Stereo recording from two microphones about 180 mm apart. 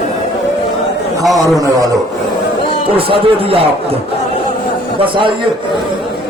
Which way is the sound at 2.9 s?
30° right (ahead or behind).